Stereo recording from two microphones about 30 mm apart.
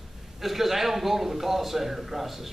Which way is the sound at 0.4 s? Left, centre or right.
Centre.